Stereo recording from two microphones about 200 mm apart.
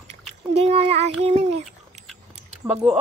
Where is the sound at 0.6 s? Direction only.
30° right (ahead or behind).